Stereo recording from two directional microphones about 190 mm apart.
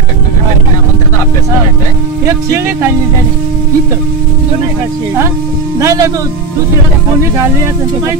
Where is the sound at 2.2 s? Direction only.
15° right (ahead or behind).